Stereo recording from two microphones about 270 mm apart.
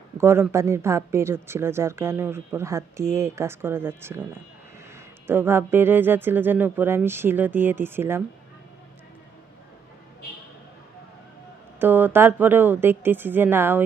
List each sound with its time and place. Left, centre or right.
0.2 s speech: centre
11.8 s speech: centre